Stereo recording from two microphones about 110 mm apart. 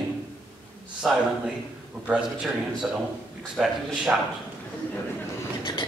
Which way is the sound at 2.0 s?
10° right (ahead or behind).